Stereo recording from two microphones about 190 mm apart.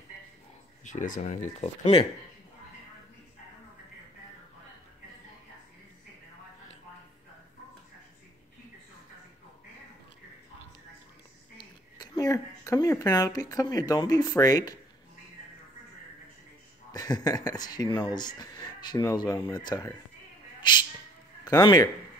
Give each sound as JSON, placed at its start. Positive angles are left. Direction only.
{"t": 0.8, "sound": "speech", "side_deg": 40}
{"t": 1.8, "sound": "speech", "side_deg": 30}
{"t": 12.0, "sound": "speech", "side_deg": 20}
{"t": 16.9, "sound": "speech", "side_deg": 20}
{"t": 21.5, "sound": "speech", "side_deg": 20}